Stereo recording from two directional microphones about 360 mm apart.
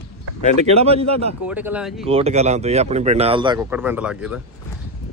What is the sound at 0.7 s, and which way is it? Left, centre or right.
Speech, centre.